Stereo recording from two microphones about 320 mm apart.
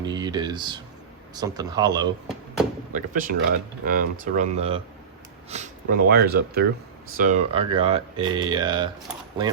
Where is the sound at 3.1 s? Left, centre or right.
Right.